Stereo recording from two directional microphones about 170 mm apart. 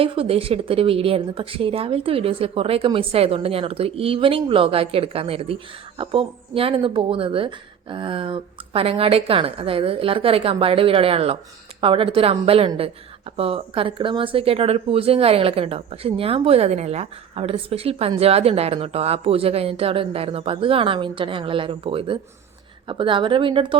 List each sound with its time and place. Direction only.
0.0 s speech: 35° right (ahead or behind)